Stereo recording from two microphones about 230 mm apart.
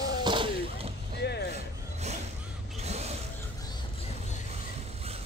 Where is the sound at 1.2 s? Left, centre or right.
Left.